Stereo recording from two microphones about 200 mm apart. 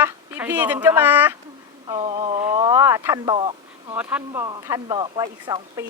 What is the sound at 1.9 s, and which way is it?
Speech, 25° right (ahead or behind).